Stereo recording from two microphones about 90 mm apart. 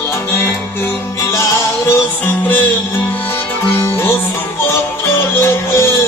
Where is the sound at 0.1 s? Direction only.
25° left (ahead or behind).